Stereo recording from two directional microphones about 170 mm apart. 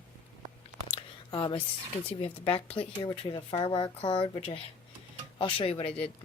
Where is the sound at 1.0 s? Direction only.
25° left (ahead or behind).